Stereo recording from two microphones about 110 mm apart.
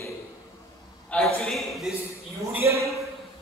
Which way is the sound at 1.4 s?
Centre (ahead or behind).